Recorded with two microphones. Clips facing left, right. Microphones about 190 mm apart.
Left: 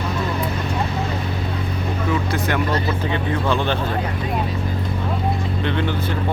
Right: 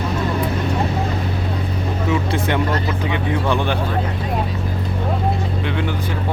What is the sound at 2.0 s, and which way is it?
Vehicle, 25° right (ahead or behind).